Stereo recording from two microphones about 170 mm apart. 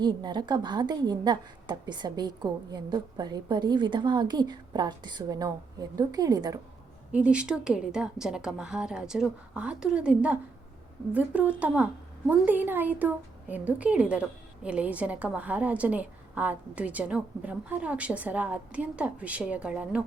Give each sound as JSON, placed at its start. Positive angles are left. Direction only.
{"t": 0.0, "sound": "a woman's voice", "side_deg": -25}
{"t": 7.1, "sound": "a woman's voice", "side_deg": -5}